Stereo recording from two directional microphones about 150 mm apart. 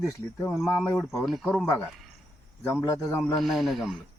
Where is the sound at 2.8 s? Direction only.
15° left (ahead or behind).